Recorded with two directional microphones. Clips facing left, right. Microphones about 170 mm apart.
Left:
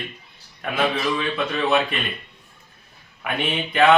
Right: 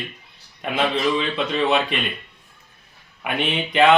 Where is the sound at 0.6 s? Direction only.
20° right (ahead or behind).